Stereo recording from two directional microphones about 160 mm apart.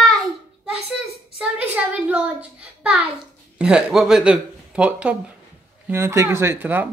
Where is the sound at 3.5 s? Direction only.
5° right (ahead or behind).